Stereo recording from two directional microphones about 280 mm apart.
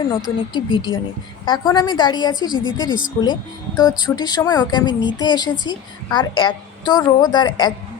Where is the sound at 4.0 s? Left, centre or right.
Centre.